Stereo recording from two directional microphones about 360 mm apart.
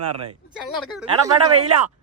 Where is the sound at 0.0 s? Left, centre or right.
Right.